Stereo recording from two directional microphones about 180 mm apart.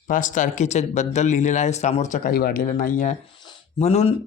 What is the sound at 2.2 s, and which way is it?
Speech, 55° left (ahead or behind).